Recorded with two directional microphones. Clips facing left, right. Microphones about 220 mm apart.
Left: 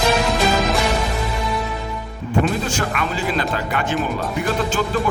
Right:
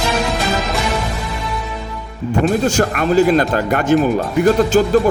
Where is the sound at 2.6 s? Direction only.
40° right (ahead or behind).